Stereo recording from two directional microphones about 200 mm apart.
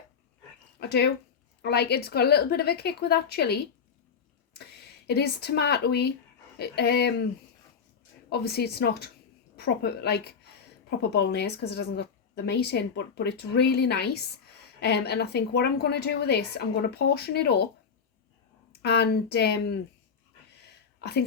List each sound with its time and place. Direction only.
0.8 s a woman's voice: 55° left (ahead or behind)
8.3 s a woman's voice: 55° left (ahead or behind)
18.7 s a woman's voice: 55° left (ahead or behind)
21.0 s a woman's voice: 55° left (ahead or behind)